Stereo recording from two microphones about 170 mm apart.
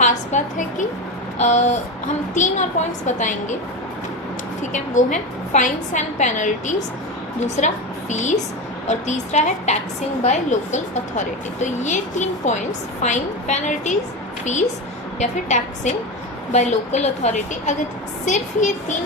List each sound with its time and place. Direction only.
0.0 s a woman's voice: 45° left (ahead or behind)
4.7 s a woman's voice: 45° left (ahead or behind)
15.2 s a woman's voice: 45° left (ahead or behind)